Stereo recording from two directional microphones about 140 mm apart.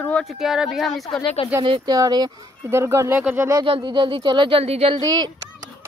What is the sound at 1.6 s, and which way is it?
Speech, 30° right (ahead or behind).